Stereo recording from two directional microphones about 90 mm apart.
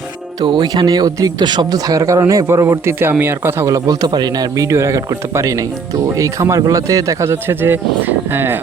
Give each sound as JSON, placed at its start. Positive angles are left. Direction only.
{"t": 0.4, "sound": "speech", "side_deg": -60}
{"t": 3.8, "sound": "speech", "side_deg": -50}
{"t": 7.3, "sound": "speech", "side_deg": -25}